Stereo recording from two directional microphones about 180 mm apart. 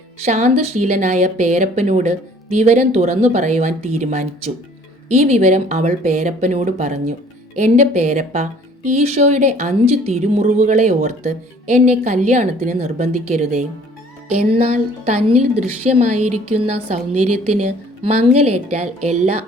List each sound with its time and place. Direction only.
0.2 s speech: 40° right (ahead or behind)